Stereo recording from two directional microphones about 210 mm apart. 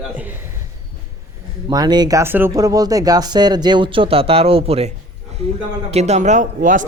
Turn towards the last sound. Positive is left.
turn(degrees=-40)  # may be behind; listen again after turning